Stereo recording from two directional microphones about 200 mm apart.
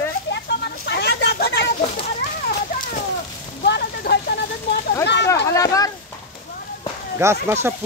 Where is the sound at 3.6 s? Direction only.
55° left (ahead or behind).